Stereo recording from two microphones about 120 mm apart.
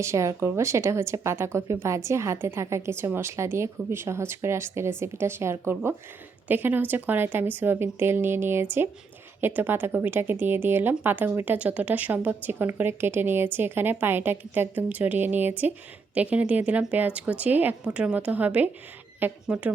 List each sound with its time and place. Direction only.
0.0 s a woman's voice: 25° right (ahead or behind)